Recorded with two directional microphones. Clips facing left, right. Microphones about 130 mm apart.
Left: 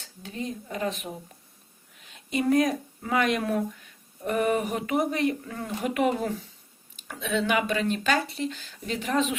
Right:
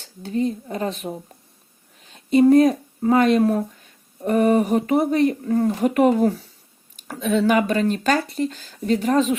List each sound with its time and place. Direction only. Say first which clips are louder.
0.0 s speech: right 12 dB; 35° right (ahead or behind)